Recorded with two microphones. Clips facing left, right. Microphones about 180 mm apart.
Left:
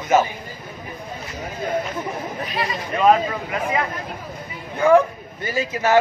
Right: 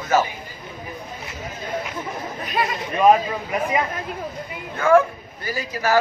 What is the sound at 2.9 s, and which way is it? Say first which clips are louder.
Speech: right 1 dB; 15° right (ahead or behind).